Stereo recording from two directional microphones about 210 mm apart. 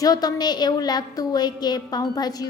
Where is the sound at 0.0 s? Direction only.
20° left (ahead or behind).